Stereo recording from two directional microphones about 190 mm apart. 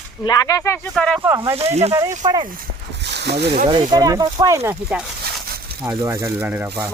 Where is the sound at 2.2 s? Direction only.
25° right (ahead or behind).